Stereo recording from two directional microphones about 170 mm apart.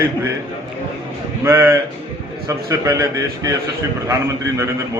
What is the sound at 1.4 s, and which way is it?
A man's voice, 15° right (ahead or behind).